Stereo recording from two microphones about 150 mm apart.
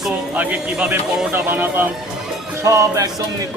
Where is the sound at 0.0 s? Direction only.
5° right (ahead or behind).